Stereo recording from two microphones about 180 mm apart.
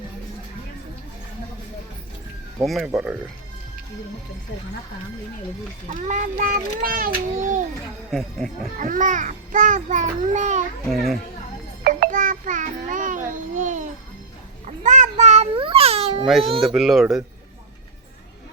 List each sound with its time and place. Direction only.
2.6 s speech: centre (ahead or behind)
5.9 s a child's voice: 45° right (ahead or behind)
8.1 s speech: centre (ahead or behind)
8.8 s a child's voice: 45° right (ahead or behind)
10.8 s speech: centre (ahead or behind)
11.8 s music: 55° right (ahead or behind)
14.8 s babbling: 45° right (ahead or behind)
16.2 s speech: centre (ahead or behind)